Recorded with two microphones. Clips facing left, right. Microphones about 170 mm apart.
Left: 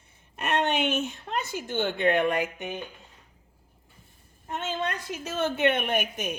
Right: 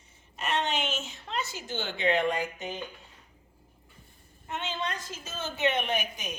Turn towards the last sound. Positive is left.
turn(degrees=55)  # may be behind; listen again after turning